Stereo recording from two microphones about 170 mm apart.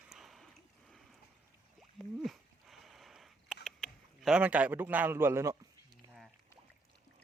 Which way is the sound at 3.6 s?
Centre (ahead or behind).